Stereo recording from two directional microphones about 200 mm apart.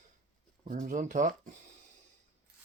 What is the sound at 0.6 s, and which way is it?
Speech, 40° right (ahead or behind).